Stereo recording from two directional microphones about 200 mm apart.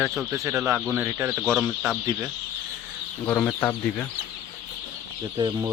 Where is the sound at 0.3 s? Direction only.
15° right (ahead or behind).